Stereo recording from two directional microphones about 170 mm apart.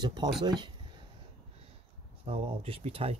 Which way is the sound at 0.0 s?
25° right (ahead or behind).